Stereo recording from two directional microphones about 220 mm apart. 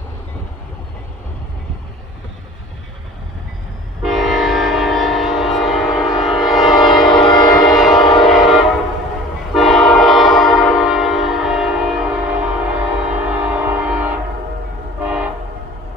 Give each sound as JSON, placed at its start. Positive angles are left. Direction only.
{"t": 4.0, "sound": "train", "side_deg": 0}
{"t": 7.1, "sound": "music", "side_deg": 20}
{"t": 7.7, "sound": "train", "side_deg": 0}